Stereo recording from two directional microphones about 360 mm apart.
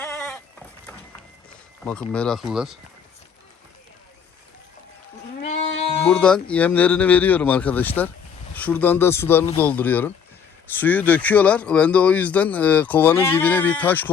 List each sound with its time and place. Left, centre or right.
0.0 s sheep: centre
1.8 s speech: centre
5.4 s goat: centre
5.7 s sheep: centre
6.1 s speech: centre